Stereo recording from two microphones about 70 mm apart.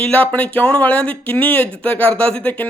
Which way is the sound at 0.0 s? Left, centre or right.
Left.